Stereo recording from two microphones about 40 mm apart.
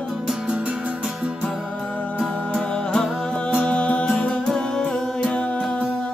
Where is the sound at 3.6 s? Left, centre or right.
Left.